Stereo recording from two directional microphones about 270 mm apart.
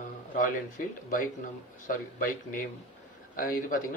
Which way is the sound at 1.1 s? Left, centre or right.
Left.